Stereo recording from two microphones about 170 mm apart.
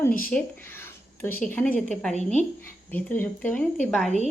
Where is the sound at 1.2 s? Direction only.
10° left (ahead or behind).